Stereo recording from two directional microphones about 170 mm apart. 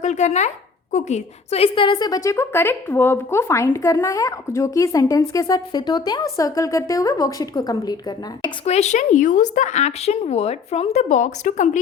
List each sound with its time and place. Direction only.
0.0 s a woman's voice: 45° left (ahead or behind); by 7.9 s 20° left (ahead or behind)
8.4 s a woman's voice: 40° left (ahead or behind)